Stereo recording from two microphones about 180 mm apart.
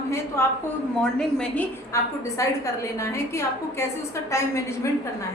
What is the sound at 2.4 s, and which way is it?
A woman's voice, 15° left (ahead or behind).